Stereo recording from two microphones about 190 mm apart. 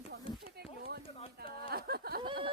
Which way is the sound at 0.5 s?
55° right (ahead or behind).